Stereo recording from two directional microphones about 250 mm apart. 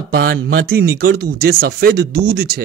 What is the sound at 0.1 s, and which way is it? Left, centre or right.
Speech, right.